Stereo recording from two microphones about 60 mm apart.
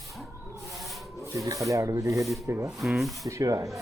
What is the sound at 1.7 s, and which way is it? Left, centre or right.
Speech, right.